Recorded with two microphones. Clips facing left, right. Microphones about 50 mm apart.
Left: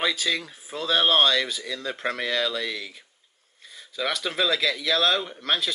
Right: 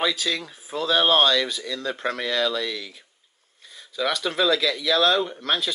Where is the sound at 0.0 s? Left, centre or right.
Centre.